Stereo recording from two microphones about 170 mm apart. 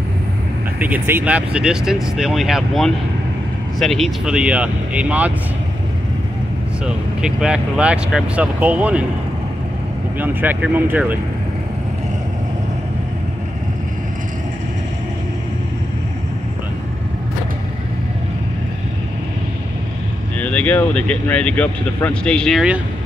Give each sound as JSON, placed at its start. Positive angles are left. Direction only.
{"t": 0.7, "sound": "speech", "side_deg": -10}
{"t": 7.2, "sound": "speech", "side_deg": -5}
{"t": 10.1, "sound": "speech", "side_deg": -10}
{"t": 20.3, "sound": "speech", "side_deg": 10}